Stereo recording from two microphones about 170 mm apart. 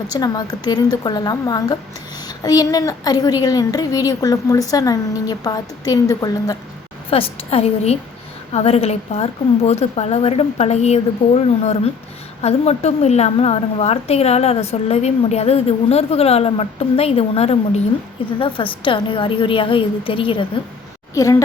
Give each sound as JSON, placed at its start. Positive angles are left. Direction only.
{"t": 0.1, "sound": "a woman's voice", "side_deg": 25}
{"t": 7.1, "sound": "a woman's voice", "side_deg": 35}
{"t": 12.4, "sound": "a woman's voice", "side_deg": 40}
{"t": 21.2, "sound": "a woman's voice", "side_deg": 20}